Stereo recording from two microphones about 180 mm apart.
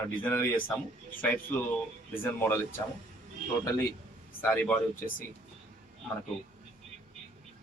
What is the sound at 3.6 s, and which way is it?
Speech, 15° left (ahead or behind).